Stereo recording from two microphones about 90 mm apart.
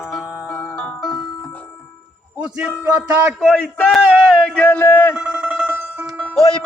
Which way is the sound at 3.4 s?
5° left (ahead or behind).